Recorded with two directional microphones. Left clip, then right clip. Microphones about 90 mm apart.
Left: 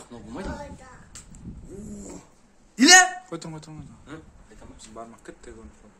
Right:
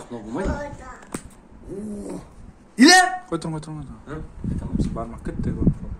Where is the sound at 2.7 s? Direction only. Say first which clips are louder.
Right 1 dB; centre (ahead or behind).